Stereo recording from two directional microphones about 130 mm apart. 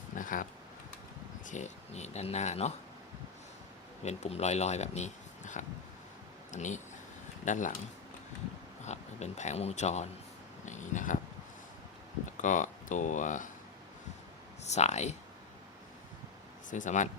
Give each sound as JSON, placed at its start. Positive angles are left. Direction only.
{"t": 0.2, "sound": "a sound", "side_deg": 90}
{"t": 1.5, "sound": "speech", "side_deg": 65}
{"t": 4.0, "sound": "speech", "side_deg": 60}
{"t": 8.8, "sound": "speech", "side_deg": 60}
{"t": 10.7, "sound": "a sound", "side_deg": 70}
{"t": 12.4, "sound": "speech", "side_deg": 75}
{"t": 14.6, "sound": "speech", "side_deg": 60}
{"t": 16.6, "sound": "speech", "side_deg": 80}